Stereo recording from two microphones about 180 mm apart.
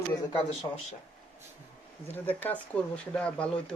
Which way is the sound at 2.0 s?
10° left (ahead or behind).